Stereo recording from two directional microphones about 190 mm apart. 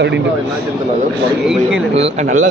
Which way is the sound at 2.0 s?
40° right (ahead or behind).